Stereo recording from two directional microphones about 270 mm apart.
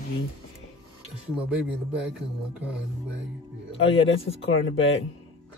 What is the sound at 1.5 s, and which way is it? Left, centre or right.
Speech, centre.